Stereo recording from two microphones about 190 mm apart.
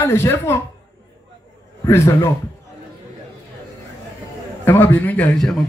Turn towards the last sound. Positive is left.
turn(degrees=5)  # may be behind; listen again after turning